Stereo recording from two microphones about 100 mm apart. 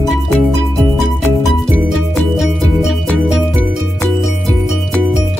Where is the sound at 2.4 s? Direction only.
Centre (ahead or behind).